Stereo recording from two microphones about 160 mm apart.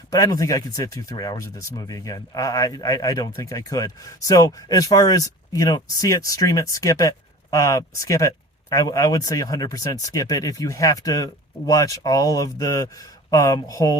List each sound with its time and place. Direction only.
0.1 s speech: 20° left (ahead or behind)